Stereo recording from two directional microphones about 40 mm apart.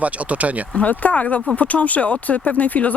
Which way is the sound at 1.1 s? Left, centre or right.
Left.